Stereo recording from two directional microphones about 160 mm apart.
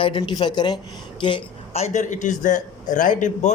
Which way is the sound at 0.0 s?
30° left (ahead or behind).